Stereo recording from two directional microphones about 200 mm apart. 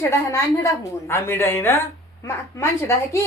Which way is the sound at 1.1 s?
10° left (ahead or behind).